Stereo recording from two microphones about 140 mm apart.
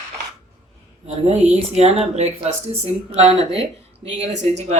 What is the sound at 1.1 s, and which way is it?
A woman's voice, 50° right (ahead or behind).